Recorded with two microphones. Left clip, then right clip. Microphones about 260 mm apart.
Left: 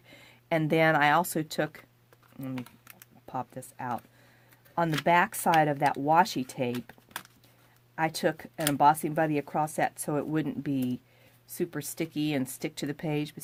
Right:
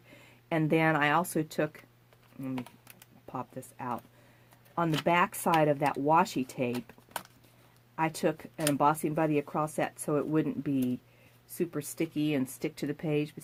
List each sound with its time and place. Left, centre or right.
0.1 s speech: left
3.2 s speech: left
7.9 s speech: left